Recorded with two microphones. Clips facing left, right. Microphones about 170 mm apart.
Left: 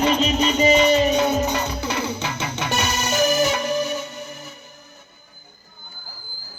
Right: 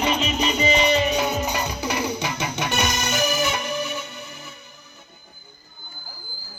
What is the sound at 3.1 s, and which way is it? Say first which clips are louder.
Music: left 8 dB; 40° left (ahead or behind).